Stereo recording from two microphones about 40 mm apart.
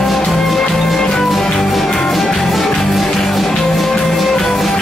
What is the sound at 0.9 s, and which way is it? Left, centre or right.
Music, centre.